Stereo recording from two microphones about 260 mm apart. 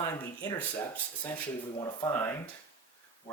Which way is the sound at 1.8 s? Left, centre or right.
Centre.